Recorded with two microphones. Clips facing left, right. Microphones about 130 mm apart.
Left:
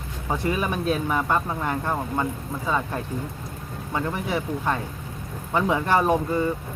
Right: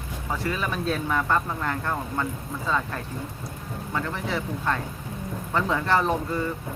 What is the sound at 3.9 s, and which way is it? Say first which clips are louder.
Speech: left 3 dB; 15° left (ahead or behind).